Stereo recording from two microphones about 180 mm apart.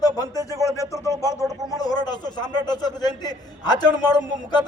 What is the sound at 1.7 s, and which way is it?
A man's voice, 20° left (ahead or behind).